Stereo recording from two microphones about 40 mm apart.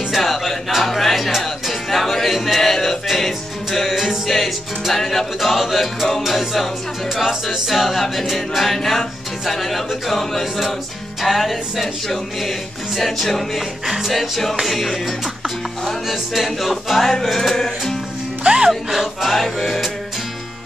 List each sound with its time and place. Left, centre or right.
0.1 s music: centre
3.9 s music: centre
13.8 s music: centre
17.0 s music: centre
18.4 s speech: right
18.7 s music: centre